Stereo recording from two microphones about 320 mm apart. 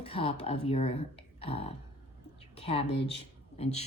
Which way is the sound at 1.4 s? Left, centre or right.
Centre.